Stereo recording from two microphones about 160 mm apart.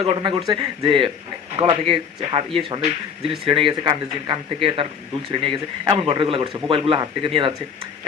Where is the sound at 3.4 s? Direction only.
35° right (ahead or behind).